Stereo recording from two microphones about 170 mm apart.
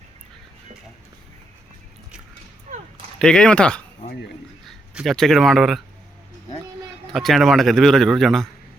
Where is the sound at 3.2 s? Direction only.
5° left (ahead or behind).